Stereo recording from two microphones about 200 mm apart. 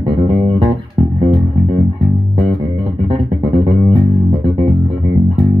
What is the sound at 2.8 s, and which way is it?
Music, 25° right (ahead or behind).